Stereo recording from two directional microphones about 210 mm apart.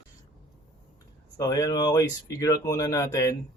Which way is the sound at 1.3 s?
15° left (ahead or behind).